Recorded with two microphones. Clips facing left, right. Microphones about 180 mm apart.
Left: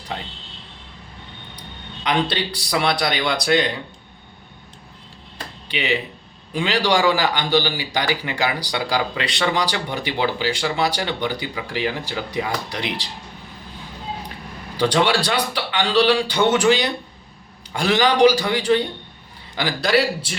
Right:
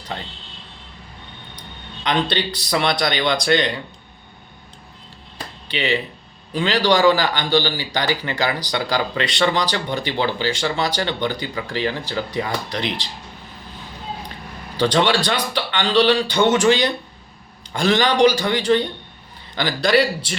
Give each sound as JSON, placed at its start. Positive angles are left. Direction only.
{"t": 2.0, "sound": "speech", "side_deg": 5}
{"t": 5.7, "sound": "speech", "side_deg": 10}
{"t": 14.8, "sound": "speech", "side_deg": 10}